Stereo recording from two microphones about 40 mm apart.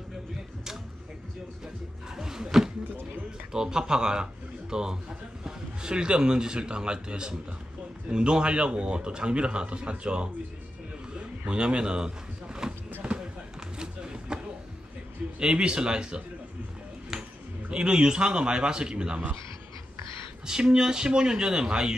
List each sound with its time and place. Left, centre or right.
2.1 s a sound: centre
3.5 s a man's voice: centre
11.4 s a man's voice: right
12.6 s basketball bounce: centre
13.7 s a sound: right
15.3 s a man's voice: right
17.1 s a sound: centre
17.6 s a man's voice: right
20.4 s a man's voice: centre